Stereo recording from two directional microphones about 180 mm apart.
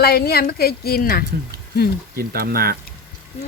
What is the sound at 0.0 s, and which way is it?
A woman's voice, 60° left (ahead or behind).